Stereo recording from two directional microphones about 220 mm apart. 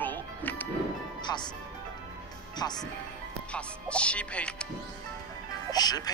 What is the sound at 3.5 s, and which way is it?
Speech, 5° left (ahead or behind).